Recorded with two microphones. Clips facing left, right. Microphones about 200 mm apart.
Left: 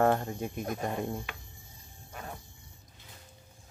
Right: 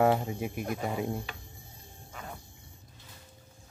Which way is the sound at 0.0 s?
10° right (ahead or behind).